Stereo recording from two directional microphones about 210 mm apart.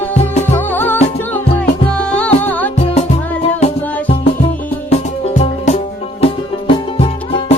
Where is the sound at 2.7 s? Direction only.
30° left (ahead or behind).